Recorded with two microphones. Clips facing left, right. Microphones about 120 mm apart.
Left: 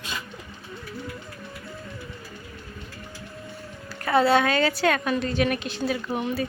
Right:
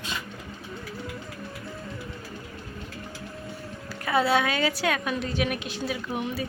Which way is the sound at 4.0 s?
5° right (ahead or behind).